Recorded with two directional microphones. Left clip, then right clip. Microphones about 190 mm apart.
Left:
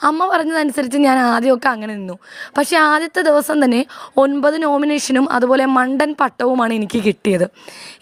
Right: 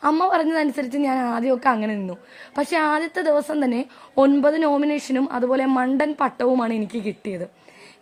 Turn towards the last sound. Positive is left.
turn(degrees=40)  # may be behind; listen again after turning